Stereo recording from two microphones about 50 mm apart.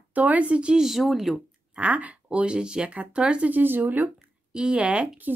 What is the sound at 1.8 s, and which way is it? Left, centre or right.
Speech, right.